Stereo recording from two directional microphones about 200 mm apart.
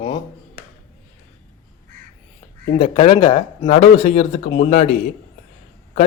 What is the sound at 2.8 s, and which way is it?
Speech, 30° left (ahead or behind).